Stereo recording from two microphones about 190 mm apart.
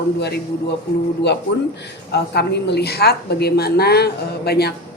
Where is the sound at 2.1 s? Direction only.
60° left (ahead or behind).